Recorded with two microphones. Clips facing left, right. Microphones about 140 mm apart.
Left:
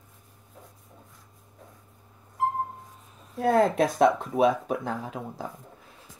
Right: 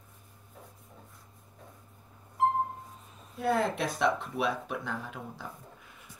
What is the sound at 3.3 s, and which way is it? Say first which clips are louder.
Speech: left 7 dB; 40° left (ahead or behind).